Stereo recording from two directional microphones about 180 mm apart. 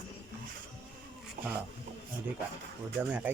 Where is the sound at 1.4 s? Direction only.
45° right (ahead or behind).